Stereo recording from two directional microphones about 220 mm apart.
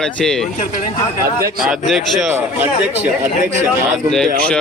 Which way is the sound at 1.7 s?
Centre (ahead or behind).